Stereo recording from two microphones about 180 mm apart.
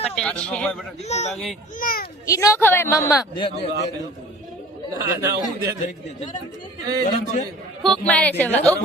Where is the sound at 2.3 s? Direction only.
15° left (ahead or behind).